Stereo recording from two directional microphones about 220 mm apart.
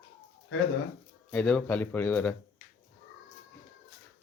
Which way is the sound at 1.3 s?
5° left (ahead or behind).